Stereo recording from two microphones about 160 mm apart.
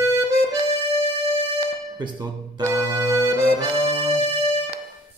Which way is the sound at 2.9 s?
20° right (ahead or behind).